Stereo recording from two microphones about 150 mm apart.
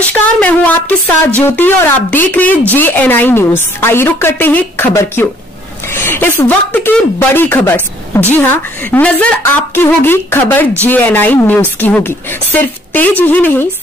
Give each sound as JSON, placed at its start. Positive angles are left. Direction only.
{"t": 0.0, "sound": "speech", "side_deg": 10}